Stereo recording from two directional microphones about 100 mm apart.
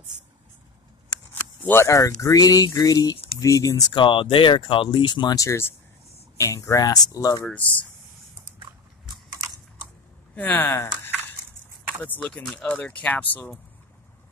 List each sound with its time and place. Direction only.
1.7 s speech: 30° left (ahead or behind)
3.9 s speech: 55° left (ahead or behind)
5.3 s speech: 30° left (ahead or behind)
8.5 s biting: 50° right (ahead or behind)
10.3 s speech: 15° left (ahead or behind)
12.2 s speech: 10° left (ahead or behind)